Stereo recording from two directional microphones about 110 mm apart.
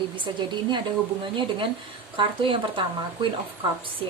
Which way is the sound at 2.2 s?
50° right (ahead or behind).